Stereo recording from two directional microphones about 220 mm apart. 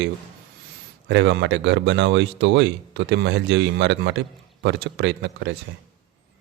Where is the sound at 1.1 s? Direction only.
55° right (ahead or behind).